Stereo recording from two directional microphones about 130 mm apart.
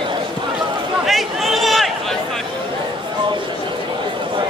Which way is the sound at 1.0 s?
Centre (ahead or behind).